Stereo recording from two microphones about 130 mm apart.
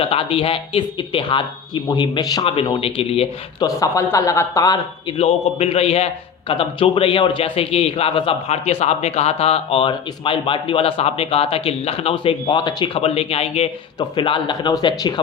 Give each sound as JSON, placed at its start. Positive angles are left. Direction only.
{"t": 0.0, "sound": "speech", "side_deg": 45}
{"t": 2.4, "sound": "a man's voice", "side_deg": 45}
{"t": 3.6, "sound": "a man's voice", "side_deg": 25}
{"t": 5.1, "sound": "a man's voice", "side_deg": 50}